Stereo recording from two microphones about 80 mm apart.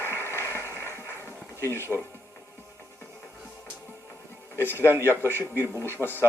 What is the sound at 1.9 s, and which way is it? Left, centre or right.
Music, centre.